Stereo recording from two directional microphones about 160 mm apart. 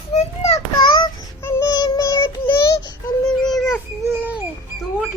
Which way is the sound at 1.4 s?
20° left (ahead or behind).